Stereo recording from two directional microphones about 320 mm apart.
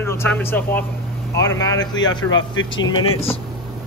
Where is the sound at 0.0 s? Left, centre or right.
Centre.